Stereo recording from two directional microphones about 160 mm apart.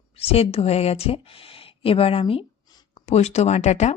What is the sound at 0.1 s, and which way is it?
Speech, 40° left (ahead or behind).